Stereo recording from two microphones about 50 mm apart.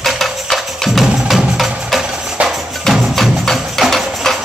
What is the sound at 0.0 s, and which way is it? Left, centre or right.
Music, centre.